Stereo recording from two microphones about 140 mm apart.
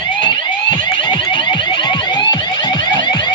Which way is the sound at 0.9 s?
35° left (ahead or behind).